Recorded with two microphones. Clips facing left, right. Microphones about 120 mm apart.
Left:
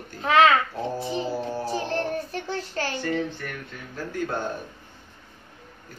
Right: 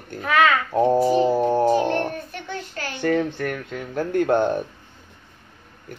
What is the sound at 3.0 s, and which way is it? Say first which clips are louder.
Speech: right 6 dB; 60° right (ahead or behind).